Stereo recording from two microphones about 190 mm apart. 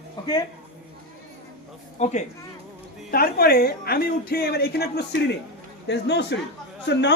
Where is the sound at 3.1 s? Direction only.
50° left (ahead or behind).